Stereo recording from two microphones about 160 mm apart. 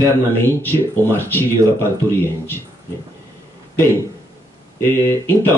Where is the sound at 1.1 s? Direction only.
15° left (ahead or behind).